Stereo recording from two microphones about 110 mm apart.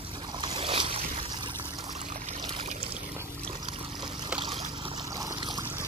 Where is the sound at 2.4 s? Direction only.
45° right (ahead or behind).